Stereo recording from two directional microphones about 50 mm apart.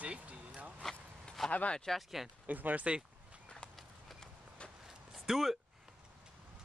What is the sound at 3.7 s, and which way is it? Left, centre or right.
Walk, centre.